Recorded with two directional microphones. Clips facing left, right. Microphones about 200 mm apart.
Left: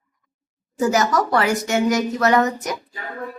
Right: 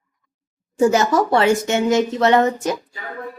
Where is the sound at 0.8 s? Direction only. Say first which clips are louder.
Right 3 dB; 25° right (ahead or behind).